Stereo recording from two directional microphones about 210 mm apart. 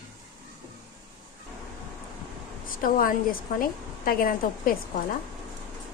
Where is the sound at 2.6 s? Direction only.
40° left (ahead or behind).